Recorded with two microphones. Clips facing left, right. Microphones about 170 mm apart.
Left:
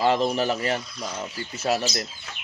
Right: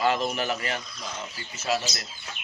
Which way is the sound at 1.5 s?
60° left (ahead or behind).